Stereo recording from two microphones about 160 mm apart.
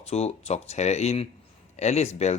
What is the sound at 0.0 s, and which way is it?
Speech, 40° left (ahead or behind).